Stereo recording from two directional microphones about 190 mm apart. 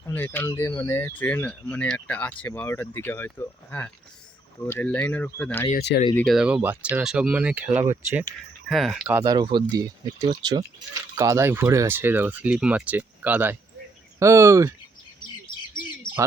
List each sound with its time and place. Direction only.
0.0 s speech: 10° left (ahead or behind)
5.7 s speech: 60° left (ahead or behind)
6.1 s speech: centre (ahead or behind)
9.2 s speech: 20° right (ahead or behind)